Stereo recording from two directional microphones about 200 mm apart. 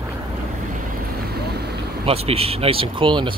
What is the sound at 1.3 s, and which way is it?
Boat, 55° right (ahead or behind).